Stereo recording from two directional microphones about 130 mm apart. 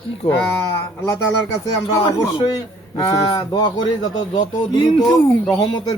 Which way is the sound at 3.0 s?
40° left (ahead or behind).